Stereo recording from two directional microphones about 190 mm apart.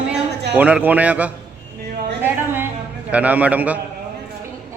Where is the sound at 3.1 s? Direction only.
10° right (ahead or behind).